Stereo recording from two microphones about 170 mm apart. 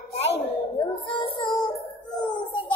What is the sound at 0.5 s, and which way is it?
Music, 30° left (ahead or behind).